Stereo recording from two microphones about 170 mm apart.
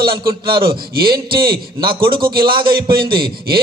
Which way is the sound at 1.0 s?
60° right (ahead or behind).